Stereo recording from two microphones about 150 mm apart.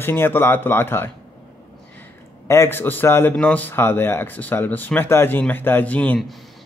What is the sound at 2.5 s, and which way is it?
A man's voice, 15° left (ahead or behind).